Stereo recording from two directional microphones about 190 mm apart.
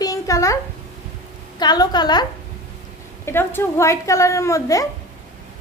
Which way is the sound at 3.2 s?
10° left (ahead or behind).